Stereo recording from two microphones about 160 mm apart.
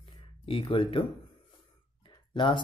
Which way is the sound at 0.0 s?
35° left (ahead or behind).